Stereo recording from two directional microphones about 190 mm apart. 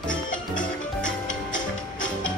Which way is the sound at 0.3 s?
45° left (ahead or behind).